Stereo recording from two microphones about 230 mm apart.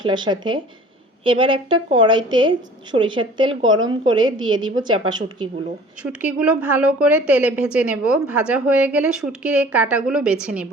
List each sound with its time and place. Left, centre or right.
0.0 s a woman's voice: centre
6.0 s a woman's voice: centre